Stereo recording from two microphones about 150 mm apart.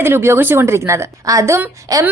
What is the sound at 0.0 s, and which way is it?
A woman's voice, 15° right (ahead or behind).